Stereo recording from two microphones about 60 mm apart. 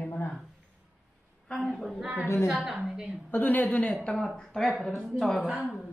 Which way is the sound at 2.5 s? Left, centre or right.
Centre.